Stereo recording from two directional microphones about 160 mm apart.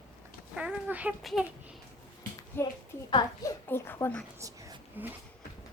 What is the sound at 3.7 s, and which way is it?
Speech, 15° left (ahead or behind).